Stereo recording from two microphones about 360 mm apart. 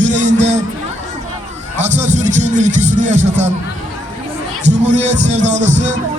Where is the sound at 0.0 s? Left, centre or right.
Centre.